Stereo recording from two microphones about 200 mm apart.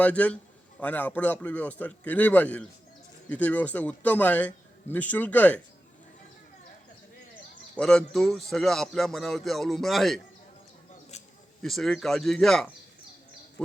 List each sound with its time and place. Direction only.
0.0 s a man's voice: 5° left (ahead or behind)
7.8 s speech: 5° left (ahead or behind)
11.1 s a sound: 35° left (ahead or behind)
11.6 s speech: centre (ahead or behind)